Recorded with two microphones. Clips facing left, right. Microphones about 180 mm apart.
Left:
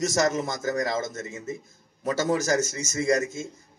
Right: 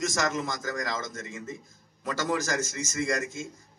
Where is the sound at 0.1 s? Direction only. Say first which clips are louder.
Left 5 dB; 40° left (ahead or behind).